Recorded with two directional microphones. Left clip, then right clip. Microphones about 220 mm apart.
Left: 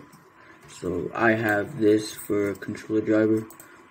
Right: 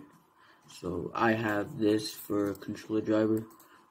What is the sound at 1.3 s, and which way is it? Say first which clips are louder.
Speech: left 10 dB; 15° right (ahead or behind).